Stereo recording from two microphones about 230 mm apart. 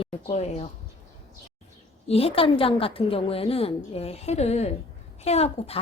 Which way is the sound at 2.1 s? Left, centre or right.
Left.